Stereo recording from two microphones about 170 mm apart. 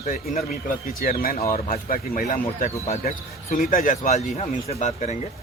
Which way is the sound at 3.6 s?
55° left (ahead or behind).